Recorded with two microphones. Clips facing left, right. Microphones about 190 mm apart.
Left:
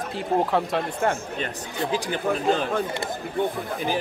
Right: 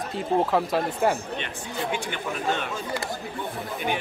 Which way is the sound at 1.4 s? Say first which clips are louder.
Left 3 dB; 35° left (ahead or behind).